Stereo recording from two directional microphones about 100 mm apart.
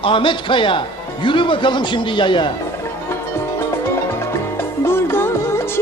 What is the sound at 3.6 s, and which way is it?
Music, 25° left (ahead or behind).